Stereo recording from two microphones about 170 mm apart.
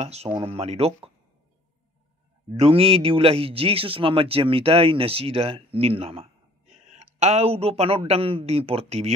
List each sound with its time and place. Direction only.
0.0 s a man's voice: 40° right (ahead or behind)
2.6 s a man's voice: 35° right (ahead or behind)